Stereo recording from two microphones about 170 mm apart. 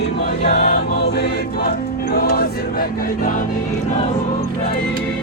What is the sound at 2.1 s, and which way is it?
Choir, 65° left (ahead or behind).